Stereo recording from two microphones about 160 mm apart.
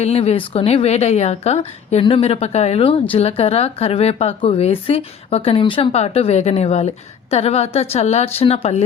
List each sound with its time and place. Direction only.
0.0 s a woman's voice: 40° left (ahead or behind)